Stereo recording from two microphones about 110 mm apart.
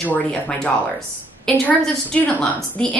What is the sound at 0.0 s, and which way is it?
A woman's voice, 10° left (ahead or behind).